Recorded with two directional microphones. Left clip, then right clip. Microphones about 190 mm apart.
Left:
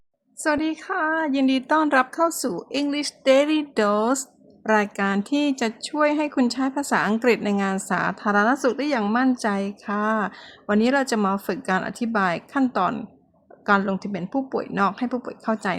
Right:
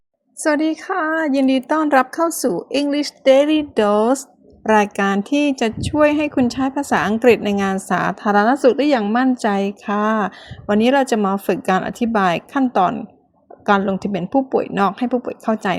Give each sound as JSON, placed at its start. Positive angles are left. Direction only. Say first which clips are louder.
{"t": 0.4, "sound": "a woman's voice", "louder": "right 5 dB", "side_deg": -15}
{"t": 13.7, "sound": "a woman's voice", "louder": "right 4 dB", "side_deg": -15}